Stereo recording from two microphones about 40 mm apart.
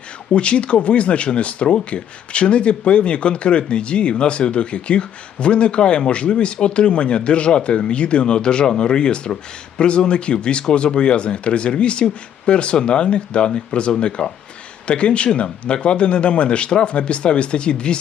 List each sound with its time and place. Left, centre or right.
0.3 s speech: left